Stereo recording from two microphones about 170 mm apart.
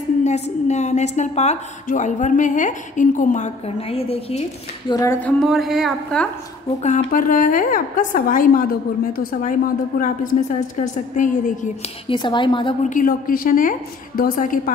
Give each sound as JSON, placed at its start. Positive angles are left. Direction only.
{"t": 0.2, "sound": "a woman's voice", "side_deg": 40}
{"t": 4.9, "sound": "music", "side_deg": 15}
{"t": 5.4, "sound": "speech", "side_deg": 0}
{"t": 6.8, "sound": "a woman's voice", "side_deg": 50}
{"t": 12.1, "sound": "speech", "side_deg": 30}
{"t": 12.8, "sound": "a woman's voice", "side_deg": 50}